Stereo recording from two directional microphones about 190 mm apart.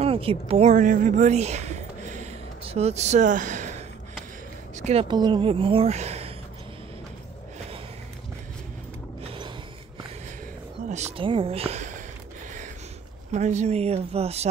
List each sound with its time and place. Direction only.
0.0 s a woman's voice: 30° right (ahead or behind)
4.8 s speech: 30° right (ahead or behind)
9.2 s a sound: 30° right (ahead or behind)
11.1 s speech: 30° right (ahead or behind)
13.3 s speech: 35° right (ahead or behind)